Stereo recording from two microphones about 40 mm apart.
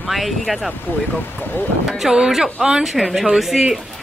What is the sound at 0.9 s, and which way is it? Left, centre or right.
Speech, left.